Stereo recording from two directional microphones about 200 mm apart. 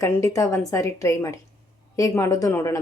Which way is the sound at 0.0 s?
15° left (ahead or behind).